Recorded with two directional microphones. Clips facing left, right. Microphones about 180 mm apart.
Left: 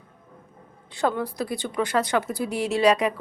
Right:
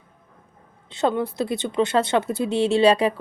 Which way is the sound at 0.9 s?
20° right (ahead or behind).